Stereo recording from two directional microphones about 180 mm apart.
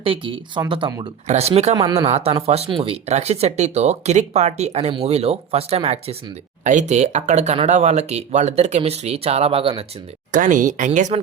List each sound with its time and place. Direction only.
0.0 s speech: 30° right (ahead or behind)
1.3 s speech: 35° right (ahead or behind)
1.7 s speech: 20° right (ahead or behind)
2.0 s speech: 35° right (ahead or behind)
10.3 s speech: 45° right (ahead or behind)